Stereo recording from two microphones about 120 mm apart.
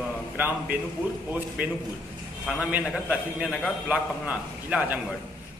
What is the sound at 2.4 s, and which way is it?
A man's voice, centre (ahead or behind).